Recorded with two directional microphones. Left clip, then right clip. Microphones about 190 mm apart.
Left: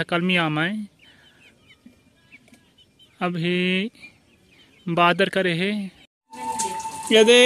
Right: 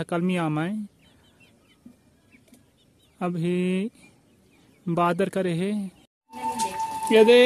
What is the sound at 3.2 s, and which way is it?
Speech, 5° right (ahead or behind).